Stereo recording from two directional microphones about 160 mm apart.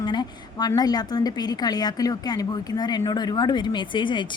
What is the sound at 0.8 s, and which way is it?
A woman's voice, 25° left (ahead or behind).